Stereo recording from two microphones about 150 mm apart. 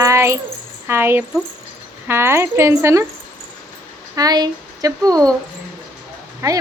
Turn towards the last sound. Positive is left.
turn(degrees=-20)  # may be behind; listen again after turning